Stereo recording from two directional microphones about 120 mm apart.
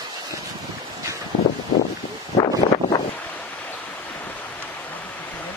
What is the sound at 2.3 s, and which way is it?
Wind, 45° left (ahead or behind).